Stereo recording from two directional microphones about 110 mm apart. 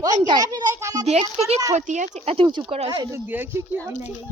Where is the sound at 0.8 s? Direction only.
30° right (ahead or behind).